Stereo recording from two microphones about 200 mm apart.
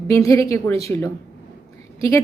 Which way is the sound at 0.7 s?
30° right (ahead or behind).